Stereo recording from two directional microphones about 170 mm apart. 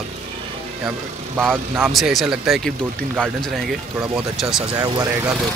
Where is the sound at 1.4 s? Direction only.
5° left (ahead or behind).